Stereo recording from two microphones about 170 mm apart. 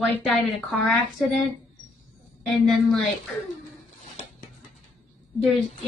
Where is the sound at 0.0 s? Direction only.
Centre (ahead or behind).